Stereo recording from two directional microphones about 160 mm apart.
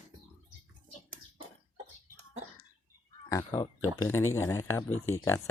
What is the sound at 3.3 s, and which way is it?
Speech, 20° left (ahead or behind).